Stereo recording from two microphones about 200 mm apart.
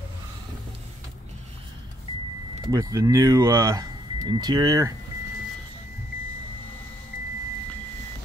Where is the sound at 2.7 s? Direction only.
15° right (ahead or behind).